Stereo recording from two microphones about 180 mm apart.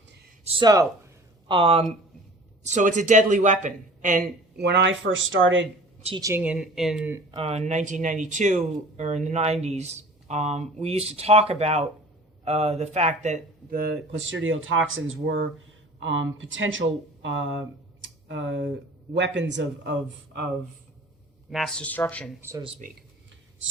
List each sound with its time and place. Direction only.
0.4 s a sound: 20° right (ahead or behind)
2.6 s speech: 40° right (ahead or behind)
4.5 s speech: 70° right (ahead or behind); by 5.6 s 90° right
6.1 s speech: 15° right (ahead or behind)
7.3 s speech: 30° right (ahead or behind); by 20.5 s 75° right (ahead or behind)
21.5 s speech: centre (ahead or behind)
22.4 s speech: 15° right (ahead or behind)